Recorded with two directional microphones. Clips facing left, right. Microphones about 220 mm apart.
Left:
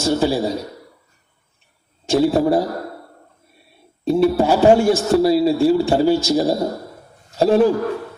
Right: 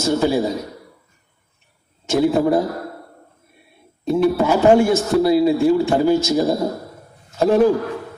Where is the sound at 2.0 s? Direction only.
30° left (ahead or behind).